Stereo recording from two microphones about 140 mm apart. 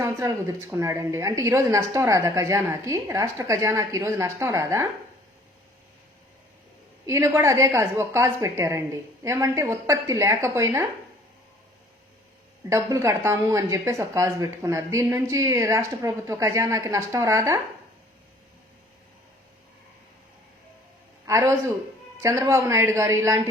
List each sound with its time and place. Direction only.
0.0 s speech: 20° right (ahead or behind)
7.1 s speech: 20° right (ahead or behind)
12.6 s speech: 20° right (ahead or behind)
21.2 s a man's voice: 20° right (ahead or behind)